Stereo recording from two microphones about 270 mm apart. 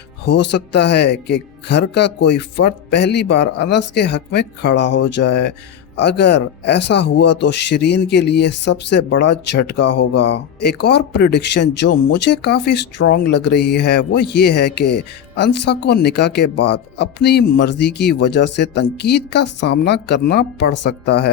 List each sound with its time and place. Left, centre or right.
0.3 s speech: left
15.4 s speech: left